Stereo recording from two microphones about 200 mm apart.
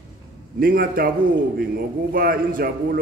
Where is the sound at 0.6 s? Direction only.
45° right (ahead or behind).